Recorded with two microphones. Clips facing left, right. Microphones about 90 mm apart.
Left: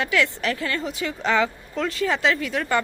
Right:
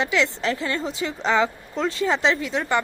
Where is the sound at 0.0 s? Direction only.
20° right (ahead or behind).